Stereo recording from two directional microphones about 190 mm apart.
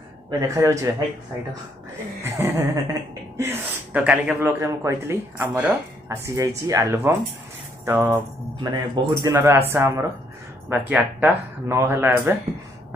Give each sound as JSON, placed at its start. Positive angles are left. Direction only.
{"t": 0.3, "sound": "speech", "side_deg": -15}
{"t": 2.2, "sound": "a woman's voice", "side_deg": -10}
{"t": 7.8, "sound": "jingle bell", "side_deg": -15}
{"t": 8.5, "sound": "speech", "side_deg": -20}